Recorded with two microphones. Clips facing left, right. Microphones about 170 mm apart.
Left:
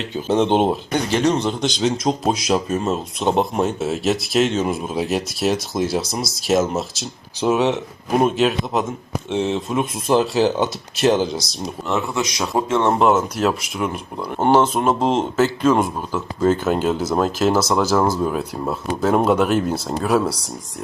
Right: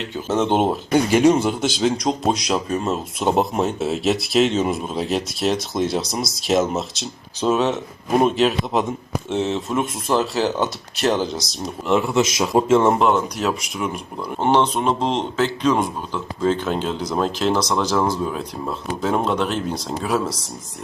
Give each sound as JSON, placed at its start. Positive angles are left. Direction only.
{"t": 0.4, "sound": "speech", "side_deg": -5}
{"t": 8.2, "sound": "speech", "side_deg": 0}
{"t": 10.1, "sound": "speech", "side_deg": 20}
{"t": 11.1, "sound": "speech", "side_deg": 5}